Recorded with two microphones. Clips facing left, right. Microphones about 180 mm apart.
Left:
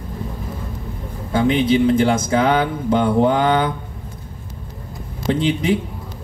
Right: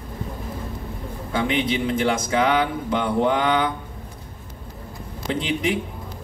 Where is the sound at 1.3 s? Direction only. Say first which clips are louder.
Left 7 dB; 30° left (ahead or behind).